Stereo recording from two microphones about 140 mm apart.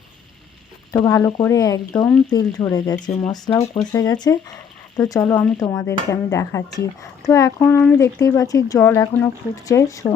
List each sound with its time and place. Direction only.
0.9 s speech: 25° left (ahead or behind)
3.5 s speech: 10° left (ahead or behind)
3.9 s speech: 25° left (ahead or behind)